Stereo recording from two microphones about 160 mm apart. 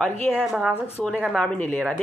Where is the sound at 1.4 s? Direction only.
10° left (ahead or behind).